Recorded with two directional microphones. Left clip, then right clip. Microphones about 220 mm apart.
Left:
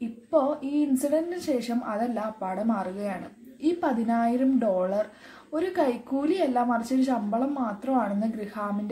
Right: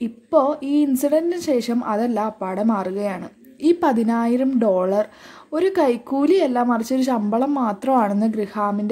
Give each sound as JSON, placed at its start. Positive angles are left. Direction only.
{"t": 0.3, "sound": "speech", "side_deg": -40}